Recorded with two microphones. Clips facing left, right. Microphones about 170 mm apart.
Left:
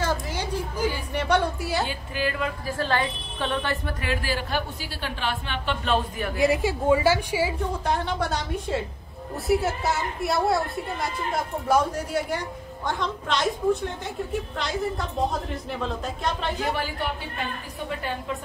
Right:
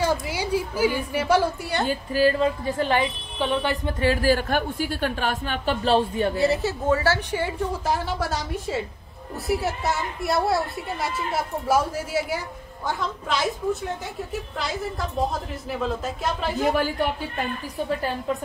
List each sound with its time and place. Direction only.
0.0 s a sound: 10° right (ahead or behind)
1.1 s a woman's voice: 5° right (ahead or behind)
1.9 s a woman's voice: 35° right (ahead or behind)
2.7 s a woman's voice: 15° right (ahead or behind)
4.0 s a woman's voice: 40° right (ahead or behind)
6.4 s a woman's voice: 15° left (ahead or behind)
7.8 s a woman's voice: 5° right (ahead or behind)
14.6 s a woman's voice: centre (ahead or behind)